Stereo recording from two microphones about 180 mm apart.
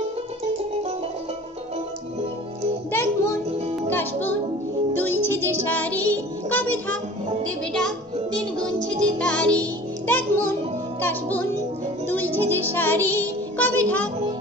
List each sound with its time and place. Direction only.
2.9 s child singing: 15° left (ahead or behind)
3.9 s music: 10° left (ahead or behind)
7.4 s speech: 5° left (ahead or behind)
9.2 s music: 5° left (ahead or behind)